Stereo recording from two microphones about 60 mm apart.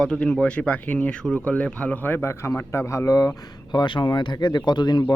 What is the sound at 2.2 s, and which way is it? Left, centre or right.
A man's voice, left.